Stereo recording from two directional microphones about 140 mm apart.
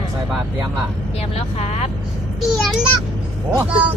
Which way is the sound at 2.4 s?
Centre (ahead or behind).